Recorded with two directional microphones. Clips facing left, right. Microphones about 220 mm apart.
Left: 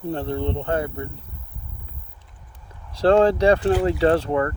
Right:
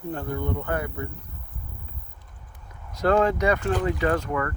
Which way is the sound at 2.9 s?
30° left (ahead or behind).